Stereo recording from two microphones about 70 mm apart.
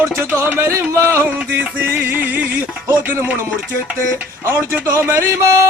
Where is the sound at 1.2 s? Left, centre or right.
Right.